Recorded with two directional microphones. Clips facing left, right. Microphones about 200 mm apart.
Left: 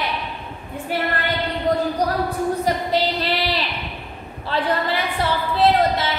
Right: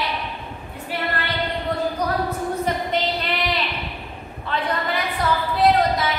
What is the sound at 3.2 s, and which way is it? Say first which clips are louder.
Child singing: left 2 dB; 30° left (ahead or behind).